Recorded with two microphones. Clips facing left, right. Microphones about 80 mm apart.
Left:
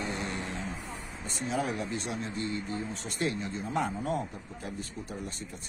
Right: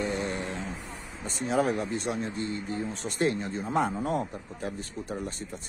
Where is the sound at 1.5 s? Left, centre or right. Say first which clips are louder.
Right 6 dB; right.